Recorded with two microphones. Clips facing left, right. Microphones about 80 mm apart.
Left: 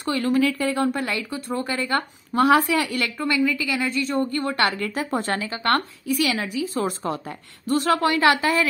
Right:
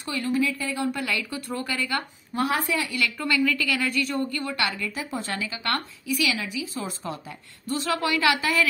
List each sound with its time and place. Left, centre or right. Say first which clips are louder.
0.0 s speech: left 5 dB; left
0.9 s speech: left 3 dB; left
2.3 s a woman's voice: left 7 dB; left
3.2 s a woman's voice: left 2 dB; left